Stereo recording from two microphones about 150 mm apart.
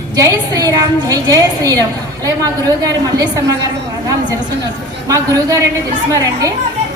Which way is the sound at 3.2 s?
20° right (ahead or behind).